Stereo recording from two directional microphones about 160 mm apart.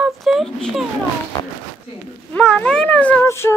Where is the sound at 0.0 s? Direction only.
Centre (ahead or behind).